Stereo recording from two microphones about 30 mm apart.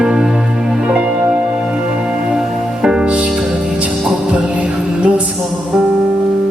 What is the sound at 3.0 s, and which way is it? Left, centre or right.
Music, right.